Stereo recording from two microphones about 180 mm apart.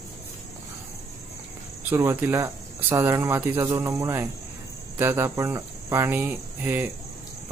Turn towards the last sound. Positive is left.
turn(degrees=-10)  # may be behind; listen again after turning